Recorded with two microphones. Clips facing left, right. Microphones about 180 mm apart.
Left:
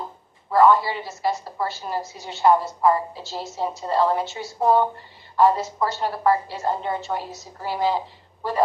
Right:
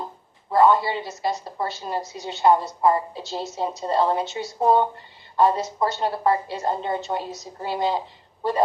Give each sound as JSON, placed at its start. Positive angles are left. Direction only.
{"t": 0.5, "sound": "a woman's voice", "side_deg": -25}